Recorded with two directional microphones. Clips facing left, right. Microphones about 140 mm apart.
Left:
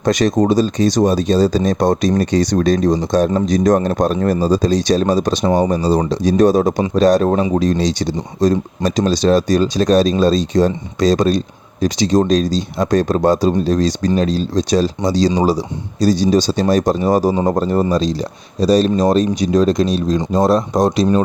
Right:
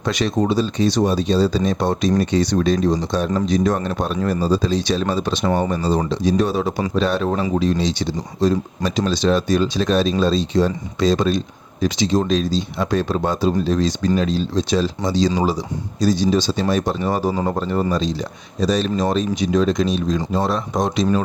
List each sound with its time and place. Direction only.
0.0 s speech: 45° left (ahead or behind)